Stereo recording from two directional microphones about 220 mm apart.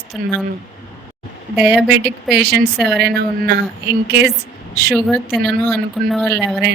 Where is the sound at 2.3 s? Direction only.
45° right (ahead or behind).